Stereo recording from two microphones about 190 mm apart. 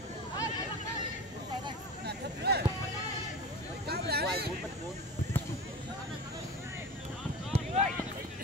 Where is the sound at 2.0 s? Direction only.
60° right (ahead or behind).